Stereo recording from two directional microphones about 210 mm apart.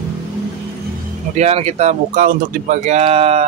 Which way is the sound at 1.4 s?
30° right (ahead or behind).